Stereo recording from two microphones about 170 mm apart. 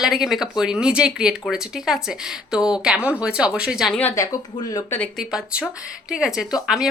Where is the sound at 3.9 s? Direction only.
15° left (ahead or behind).